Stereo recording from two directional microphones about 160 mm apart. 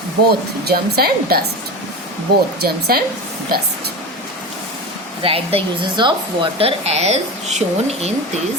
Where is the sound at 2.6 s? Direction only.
75° right (ahead or behind).